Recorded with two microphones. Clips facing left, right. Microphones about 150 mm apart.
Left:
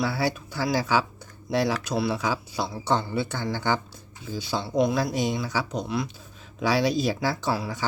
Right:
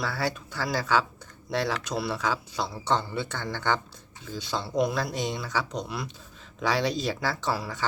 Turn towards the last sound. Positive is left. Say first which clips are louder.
# left 3 dB
turn(degrees=10)  # may be behind; listen again after turning